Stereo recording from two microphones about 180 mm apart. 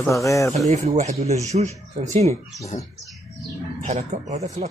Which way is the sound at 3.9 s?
40° right (ahead or behind).